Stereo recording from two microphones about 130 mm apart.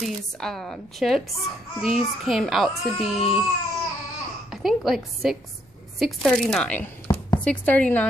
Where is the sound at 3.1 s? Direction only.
45° left (ahead or behind).